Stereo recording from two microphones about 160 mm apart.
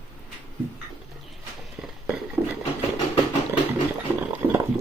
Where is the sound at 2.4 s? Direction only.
20° right (ahead or behind).